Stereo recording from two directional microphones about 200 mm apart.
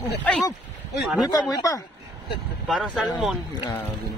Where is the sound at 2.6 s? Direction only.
Centre (ahead or behind).